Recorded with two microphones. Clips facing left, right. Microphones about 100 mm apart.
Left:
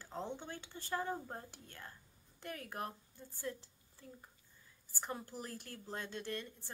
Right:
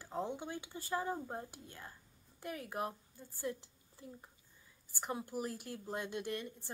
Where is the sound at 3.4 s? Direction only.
15° right (ahead or behind).